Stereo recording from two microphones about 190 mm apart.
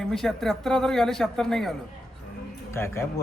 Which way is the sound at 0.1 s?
Centre (ahead or behind).